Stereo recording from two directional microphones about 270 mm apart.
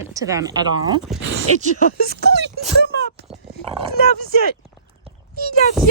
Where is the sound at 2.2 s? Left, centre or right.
Right.